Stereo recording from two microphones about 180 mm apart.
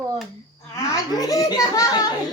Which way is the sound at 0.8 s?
20° left (ahead or behind).